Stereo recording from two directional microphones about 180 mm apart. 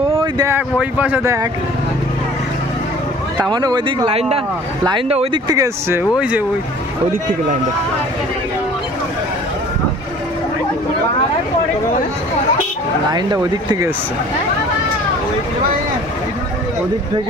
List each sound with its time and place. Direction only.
0.2 s speech: 20° right (ahead or behind)
0.6 s speech: 10° right (ahead or behind)
3.5 s speech: 20° right (ahead or behind)
4.1 s speech: 35° right (ahead or behind)
5.5 s speech: 15° right (ahead or behind)
13.1 s speech: 20° right (ahead or behind)